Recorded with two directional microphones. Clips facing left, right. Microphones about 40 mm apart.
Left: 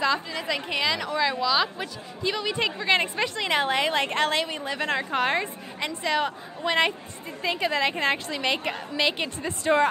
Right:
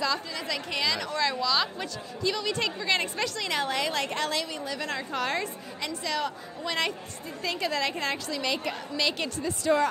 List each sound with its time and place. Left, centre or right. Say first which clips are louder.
0.0 s a woman's voice: left 4 dB; left